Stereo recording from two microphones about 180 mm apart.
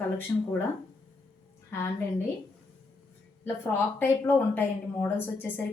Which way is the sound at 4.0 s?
10° left (ahead or behind).